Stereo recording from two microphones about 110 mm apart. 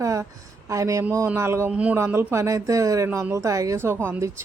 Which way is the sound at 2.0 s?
25° right (ahead or behind).